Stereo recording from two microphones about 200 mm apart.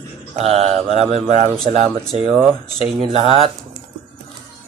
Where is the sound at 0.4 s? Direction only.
30° right (ahead or behind).